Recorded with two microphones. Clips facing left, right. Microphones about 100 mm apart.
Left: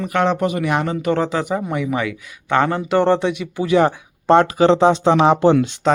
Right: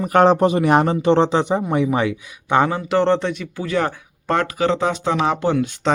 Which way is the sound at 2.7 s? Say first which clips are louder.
Left 1 dB; centre (ahead or behind).